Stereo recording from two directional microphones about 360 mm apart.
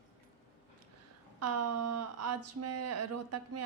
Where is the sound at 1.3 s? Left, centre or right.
Right.